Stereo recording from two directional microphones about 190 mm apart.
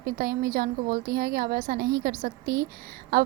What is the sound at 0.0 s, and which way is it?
A woman's voice, 50° right (ahead or behind).